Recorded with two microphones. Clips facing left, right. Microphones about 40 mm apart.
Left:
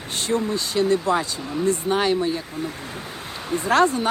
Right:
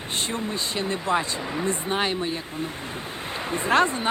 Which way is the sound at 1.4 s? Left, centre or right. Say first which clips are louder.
Left 2 dB; right.